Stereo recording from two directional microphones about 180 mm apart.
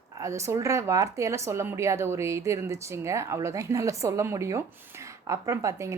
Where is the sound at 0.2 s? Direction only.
15° right (ahead or behind).